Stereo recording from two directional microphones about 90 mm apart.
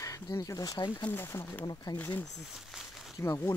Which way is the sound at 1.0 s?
25° left (ahead or behind).